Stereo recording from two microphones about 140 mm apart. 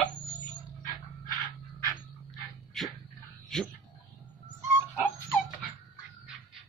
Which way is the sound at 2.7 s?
Centre (ahead or behind).